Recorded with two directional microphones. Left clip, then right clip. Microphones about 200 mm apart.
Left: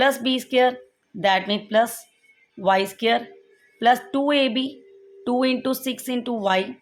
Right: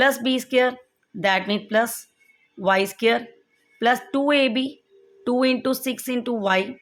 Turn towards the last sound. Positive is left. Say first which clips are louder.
# even
turn(degrees=-10)  # may be behind; listen again after turning